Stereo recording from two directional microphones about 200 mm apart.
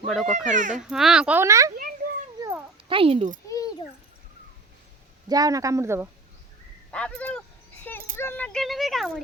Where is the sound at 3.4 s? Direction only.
15° left (ahead or behind).